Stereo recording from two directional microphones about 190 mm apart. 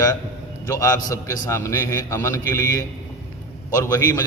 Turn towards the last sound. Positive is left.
turn(degrees=20)  # may be behind; listen again after turning